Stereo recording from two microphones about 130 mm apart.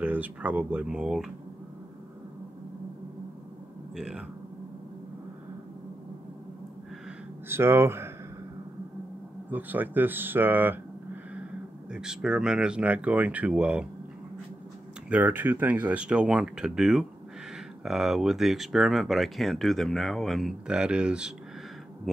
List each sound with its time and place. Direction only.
0.0 s speech: 10° right (ahead or behind)
3.9 s speech: 5° right (ahead or behind)
7.4 s speech: 20° right (ahead or behind)
9.5 s speech: 15° right (ahead or behind)
11.9 s speech: 5° right (ahead or behind)
15.0 s speech: 10° right (ahead or behind)